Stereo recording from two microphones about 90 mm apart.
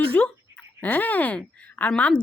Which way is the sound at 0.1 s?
15° left (ahead or behind).